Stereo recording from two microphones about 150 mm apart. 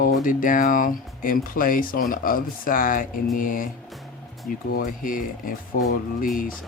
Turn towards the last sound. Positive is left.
turn(degrees=65)  # may be behind; listen again after turning